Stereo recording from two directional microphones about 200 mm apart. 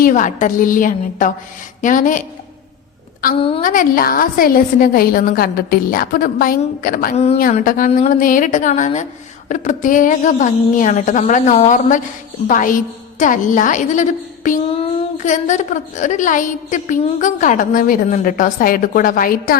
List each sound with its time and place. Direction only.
0.0 s a woman's voice: 40° left (ahead or behind)
3.6 s a woman's voice: 40° left (ahead or behind)